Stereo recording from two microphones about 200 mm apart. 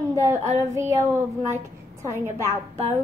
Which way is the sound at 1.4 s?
15° right (ahead or behind).